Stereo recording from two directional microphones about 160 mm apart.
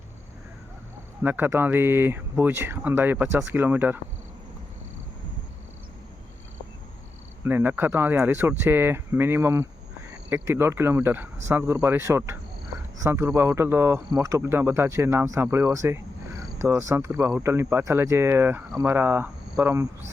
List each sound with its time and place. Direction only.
1.2 s speech: 10° right (ahead or behind)
7.4 s speech: 10° right (ahead or behind)